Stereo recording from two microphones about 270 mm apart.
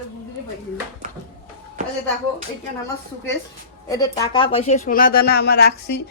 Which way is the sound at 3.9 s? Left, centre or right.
Centre.